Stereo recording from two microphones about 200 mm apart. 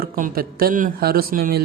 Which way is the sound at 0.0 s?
45° right (ahead or behind).